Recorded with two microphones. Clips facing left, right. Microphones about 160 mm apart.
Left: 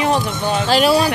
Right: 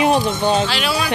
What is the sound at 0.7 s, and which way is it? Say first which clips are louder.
Speech: left 7 dB; 40° left (ahead or behind).